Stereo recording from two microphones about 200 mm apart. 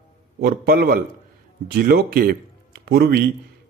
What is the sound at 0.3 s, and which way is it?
A man's voice, 50° right (ahead or behind).